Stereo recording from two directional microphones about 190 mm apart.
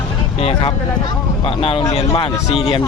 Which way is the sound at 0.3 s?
30° left (ahead or behind).